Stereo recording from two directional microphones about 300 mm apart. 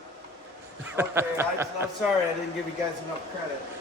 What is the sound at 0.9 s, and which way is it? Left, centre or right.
Speech, centre.